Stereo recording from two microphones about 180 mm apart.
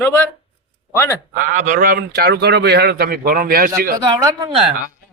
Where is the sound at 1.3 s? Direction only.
45° right (ahead or behind).